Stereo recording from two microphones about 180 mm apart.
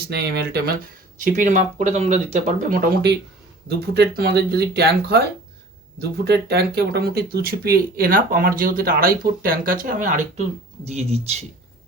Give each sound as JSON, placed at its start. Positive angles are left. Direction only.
{"t": 0.1, "sound": "speech", "side_deg": -65}
{"t": 1.2, "sound": "speech", "side_deg": -45}
{"t": 3.7, "sound": "speech", "side_deg": -60}